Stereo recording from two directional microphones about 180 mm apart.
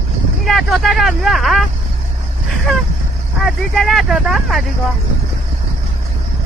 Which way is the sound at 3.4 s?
Centre (ahead or behind).